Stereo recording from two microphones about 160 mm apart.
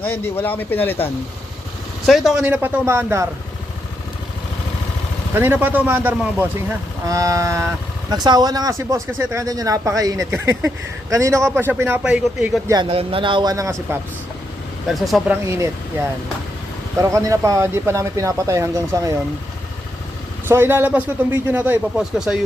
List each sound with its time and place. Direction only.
0.3 s speech: 10° left (ahead or behind)
2.0 s a man's voice: centre (ahead or behind)
5.3 s a man's voice: 15° right (ahead or behind)
12.7 s speech: 35° right (ahead or behind); by 14.0 s 20° right (ahead or behind)
14.8 s speech: centre (ahead or behind)
15.4 s a man's voice: 15° right (ahead or behind)
17.0 s speech: 20° right (ahead or behind)
20.5 s a man's voice: 15° right (ahead or behind)